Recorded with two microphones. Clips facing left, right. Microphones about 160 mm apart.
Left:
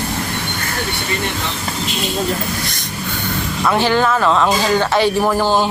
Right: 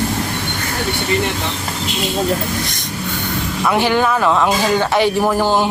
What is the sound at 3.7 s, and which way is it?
Speech, 15° right (ahead or behind).